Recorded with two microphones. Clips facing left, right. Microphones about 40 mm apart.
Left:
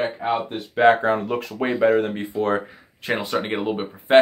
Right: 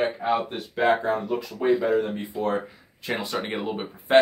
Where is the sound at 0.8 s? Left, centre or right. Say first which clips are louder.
Left 5 dB; left.